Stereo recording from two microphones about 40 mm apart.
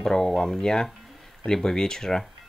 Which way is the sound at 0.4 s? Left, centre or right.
Centre.